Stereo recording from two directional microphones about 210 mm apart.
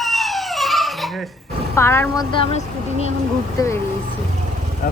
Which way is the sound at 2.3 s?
25° left (ahead or behind).